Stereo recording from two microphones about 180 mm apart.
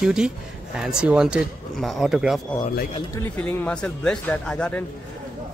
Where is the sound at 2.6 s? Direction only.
55° left (ahead or behind).